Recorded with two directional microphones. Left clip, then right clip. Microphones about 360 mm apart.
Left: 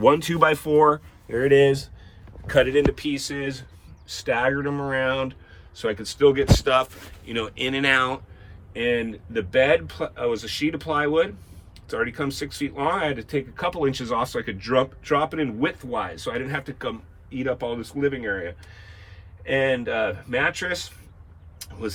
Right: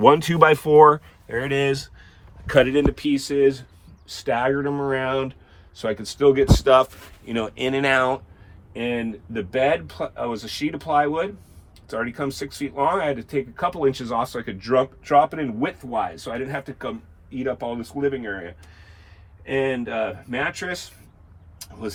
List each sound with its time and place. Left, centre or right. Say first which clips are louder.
0.0 s speech: right 3 dB; centre
1.5 s speech: left 6 dB; right
2.5 s speech: right 1 dB; centre
9.3 s speech: left 2 dB; centre
19.5 s speech: left 2 dB; centre
21.6 s vehicle: left 2 dB; centre